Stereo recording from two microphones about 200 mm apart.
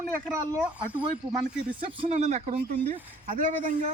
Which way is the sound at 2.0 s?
35° right (ahead or behind).